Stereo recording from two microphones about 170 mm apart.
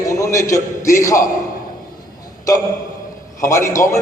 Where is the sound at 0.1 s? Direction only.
20° left (ahead or behind).